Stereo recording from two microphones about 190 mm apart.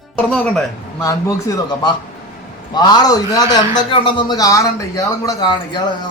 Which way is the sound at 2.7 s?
20° left (ahead or behind).